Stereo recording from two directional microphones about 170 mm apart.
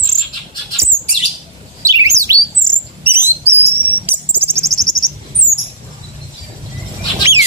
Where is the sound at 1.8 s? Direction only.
20° right (ahead or behind).